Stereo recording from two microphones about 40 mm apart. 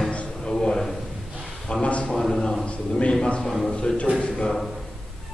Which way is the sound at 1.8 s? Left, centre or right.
Left.